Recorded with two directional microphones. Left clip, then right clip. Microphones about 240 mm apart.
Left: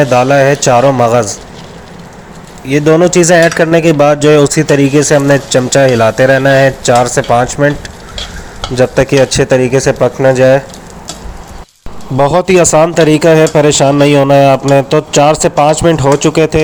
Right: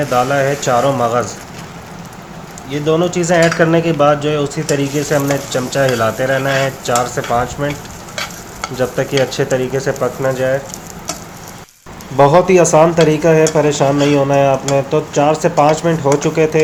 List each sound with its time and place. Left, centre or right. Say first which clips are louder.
0.0 s speech: left 7 dB; left
2.6 s speech: left 8 dB; left
8.7 s speech: left 8 dB; left
12.1 s speech: left 1 dB; left